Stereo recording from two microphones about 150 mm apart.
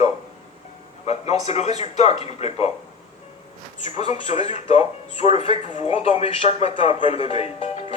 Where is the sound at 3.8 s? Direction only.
45° left (ahead or behind).